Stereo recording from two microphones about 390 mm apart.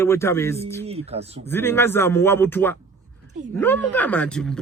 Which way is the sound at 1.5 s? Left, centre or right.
Centre.